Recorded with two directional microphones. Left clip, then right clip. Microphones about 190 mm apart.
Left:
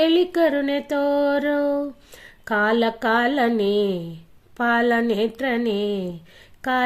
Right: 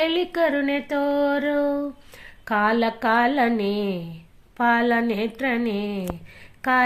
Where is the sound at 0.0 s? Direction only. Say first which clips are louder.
Left 3 dB; 45° left (ahead or behind).